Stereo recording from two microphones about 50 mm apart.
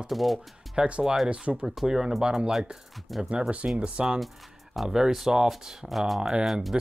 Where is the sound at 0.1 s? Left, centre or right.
Centre.